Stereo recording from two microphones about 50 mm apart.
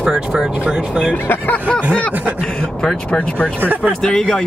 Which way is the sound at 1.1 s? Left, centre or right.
Left.